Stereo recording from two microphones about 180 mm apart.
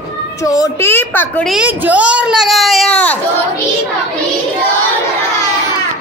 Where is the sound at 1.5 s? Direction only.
5° right (ahead or behind).